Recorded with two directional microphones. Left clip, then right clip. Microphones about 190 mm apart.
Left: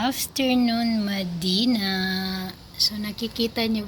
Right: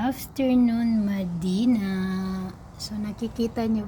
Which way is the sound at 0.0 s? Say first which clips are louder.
Left 2 dB; 15° right (ahead or behind).